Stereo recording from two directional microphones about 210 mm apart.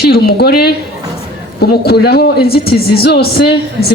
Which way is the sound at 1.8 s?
50° left (ahead or behind).